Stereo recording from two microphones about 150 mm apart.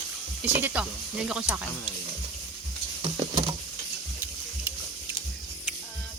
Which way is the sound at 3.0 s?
30° right (ahead or behind).